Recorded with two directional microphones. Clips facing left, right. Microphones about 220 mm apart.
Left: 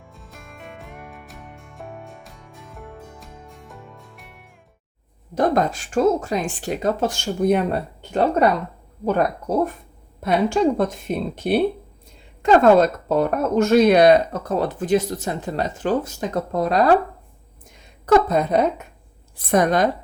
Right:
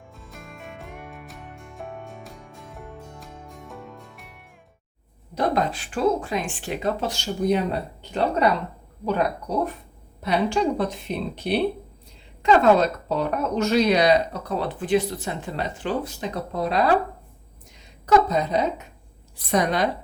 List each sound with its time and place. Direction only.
0.3 s music: centre (ahead or behind)
3.7 s music: centre (ahead or behind)
5.3 s speech: 45° left (ahead or behind)
18.0 s a woman's voice: 55° left (ahead or behind)